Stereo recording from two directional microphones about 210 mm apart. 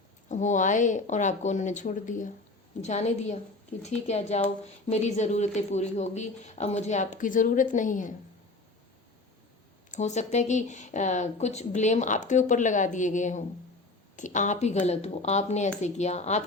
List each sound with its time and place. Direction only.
0.3 s speech: 35° left (ahead or behind)
9.9 s speech: 35° left (ahead or behind)